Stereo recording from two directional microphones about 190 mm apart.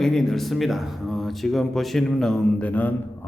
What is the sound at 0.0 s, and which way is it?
A man's voice, centre (ahead or behind).